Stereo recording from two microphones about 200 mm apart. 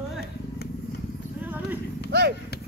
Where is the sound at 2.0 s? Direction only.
55° right (ahead or behind).